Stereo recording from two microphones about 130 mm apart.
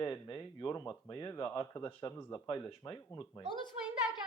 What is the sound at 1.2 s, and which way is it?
Speech, 20° left (ahead or behind).